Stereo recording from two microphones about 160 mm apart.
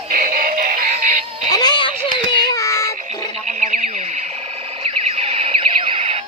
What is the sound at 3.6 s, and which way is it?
Radio, 50° right (ahead or behind).